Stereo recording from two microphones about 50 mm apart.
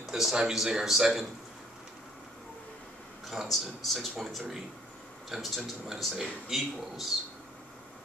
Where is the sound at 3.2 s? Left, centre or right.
Centre.